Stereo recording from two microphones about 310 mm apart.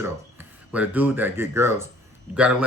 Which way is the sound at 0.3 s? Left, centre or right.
Centre.